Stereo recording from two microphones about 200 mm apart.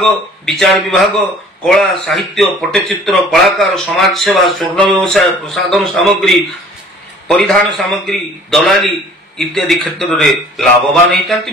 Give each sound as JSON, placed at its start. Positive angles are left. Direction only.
{"t": 0.0, "sound": "speech", "side_deg": 0}